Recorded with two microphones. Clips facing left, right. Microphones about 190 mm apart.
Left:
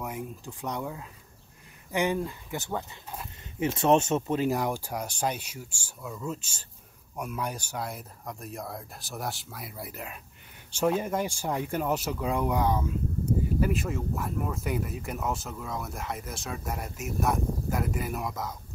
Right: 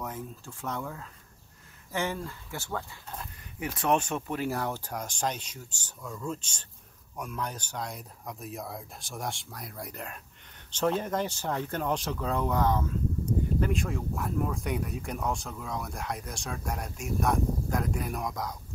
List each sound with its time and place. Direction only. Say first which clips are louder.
0.0 s speech: left 2 dB; 15° left (ahead or behind)